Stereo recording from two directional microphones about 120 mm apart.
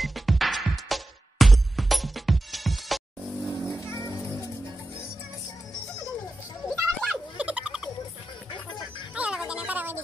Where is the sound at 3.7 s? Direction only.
25° left (ahead or behind).